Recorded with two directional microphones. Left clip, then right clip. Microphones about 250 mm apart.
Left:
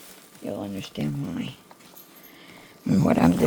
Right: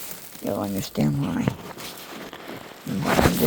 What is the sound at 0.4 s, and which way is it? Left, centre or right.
Speech, centre.